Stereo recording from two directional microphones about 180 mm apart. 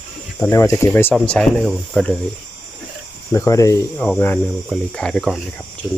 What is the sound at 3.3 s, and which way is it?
Speech, 15° left (ahead or behind).